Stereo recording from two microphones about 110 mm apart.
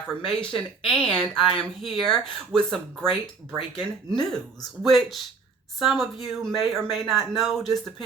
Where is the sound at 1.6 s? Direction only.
5° left (ahead or behind).